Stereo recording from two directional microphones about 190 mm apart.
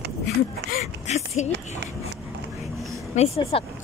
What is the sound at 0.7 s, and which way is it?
Speech, 35° left (ahead or behind).